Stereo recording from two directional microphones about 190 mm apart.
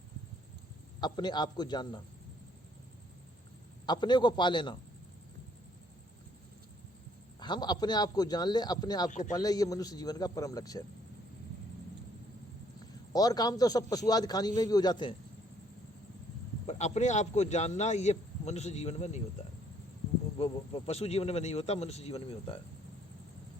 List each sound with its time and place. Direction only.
1.0 s a man's voice: 25° left (ahead or behind)
3.8 s a man's voice: 25° left (ahead or behind)
7.3 s a man's voice: 20° left (ahead or behind)
9.0 s a man's voice: 40° left (ahead or behind)
9.3 s a man's voice: 20° left (ahead or behind)
13.1 s a man's voice: 20° left (ahead or behind)
16.6 s a man's voice: 35° left (ahead or behind)
20.4 s a man's voice: 30° left (ahead or behind)